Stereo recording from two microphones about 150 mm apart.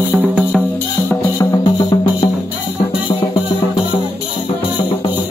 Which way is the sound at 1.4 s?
25° left (ahead or behind).